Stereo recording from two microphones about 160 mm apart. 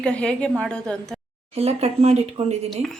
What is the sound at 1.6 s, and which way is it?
Speech, 40° right (ahead or behind).